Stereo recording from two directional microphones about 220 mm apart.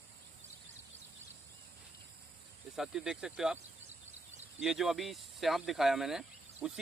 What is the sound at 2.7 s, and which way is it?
Speech, centre (ahead or behind).